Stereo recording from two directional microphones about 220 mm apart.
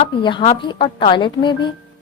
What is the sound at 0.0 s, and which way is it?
A woman's voice, 20° left (ahead or behind).